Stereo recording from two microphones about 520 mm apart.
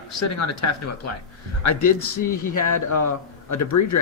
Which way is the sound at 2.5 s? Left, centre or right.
Left.